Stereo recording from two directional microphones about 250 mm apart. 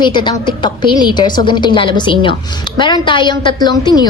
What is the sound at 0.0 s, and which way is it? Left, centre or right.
A woman's voice, centre.